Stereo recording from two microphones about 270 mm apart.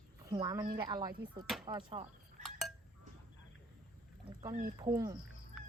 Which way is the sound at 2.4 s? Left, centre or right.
Centre.